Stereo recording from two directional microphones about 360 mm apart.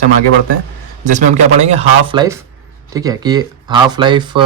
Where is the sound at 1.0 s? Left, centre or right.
Centre.